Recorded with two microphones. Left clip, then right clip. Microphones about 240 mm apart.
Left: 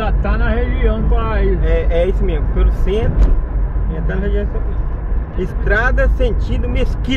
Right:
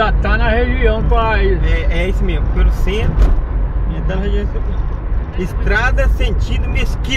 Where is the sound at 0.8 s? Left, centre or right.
Right.